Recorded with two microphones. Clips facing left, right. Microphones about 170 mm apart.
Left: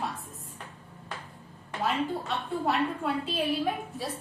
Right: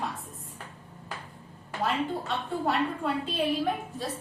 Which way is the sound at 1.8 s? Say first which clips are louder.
Even; centre (ahead or behind).